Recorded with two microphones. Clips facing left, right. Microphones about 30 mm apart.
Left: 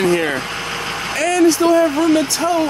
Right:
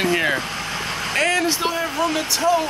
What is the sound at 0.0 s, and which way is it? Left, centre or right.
Vehicle, centre.